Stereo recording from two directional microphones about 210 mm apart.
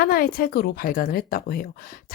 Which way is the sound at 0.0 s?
45° left (ahead or behind).